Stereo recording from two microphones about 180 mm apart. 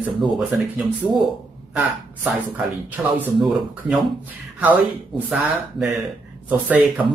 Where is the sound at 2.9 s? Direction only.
10° right (ahead or behind).